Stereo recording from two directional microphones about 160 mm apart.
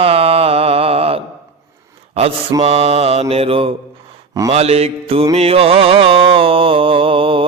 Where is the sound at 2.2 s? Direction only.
40° right (ahead or behind).